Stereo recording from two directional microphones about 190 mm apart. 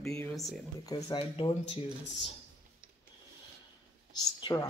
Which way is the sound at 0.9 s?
30° left (ahead or behind).